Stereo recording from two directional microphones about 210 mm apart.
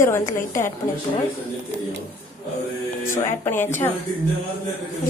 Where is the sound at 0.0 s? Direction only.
15° left (ahead or behind).